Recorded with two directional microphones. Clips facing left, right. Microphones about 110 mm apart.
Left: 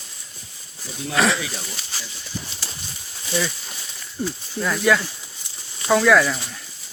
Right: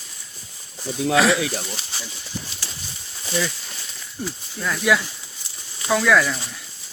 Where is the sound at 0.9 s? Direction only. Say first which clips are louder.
Right 3 dB; centre (ahead or behind).